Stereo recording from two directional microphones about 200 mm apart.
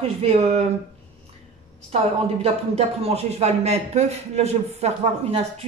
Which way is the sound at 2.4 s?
30° right (ahead or behind).